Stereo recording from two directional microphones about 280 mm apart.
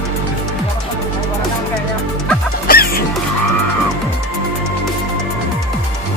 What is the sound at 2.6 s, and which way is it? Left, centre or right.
Music, left.